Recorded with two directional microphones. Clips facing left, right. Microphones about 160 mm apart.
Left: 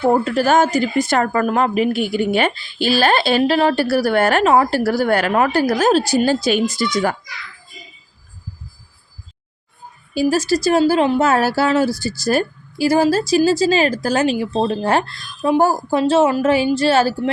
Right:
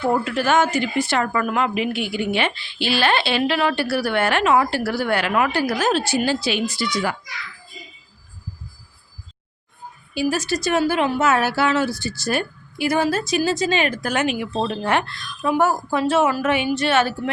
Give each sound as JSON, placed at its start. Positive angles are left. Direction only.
{"t": 0.1, "sound": "speech", "side_deg": 40}
{"t": 10.2, "sound": "speech", "side_deg": 35}